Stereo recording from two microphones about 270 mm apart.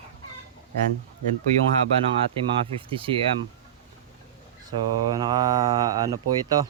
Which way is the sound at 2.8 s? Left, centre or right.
Centre.